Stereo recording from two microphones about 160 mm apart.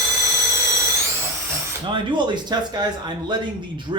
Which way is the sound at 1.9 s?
30° right (ahead or behind).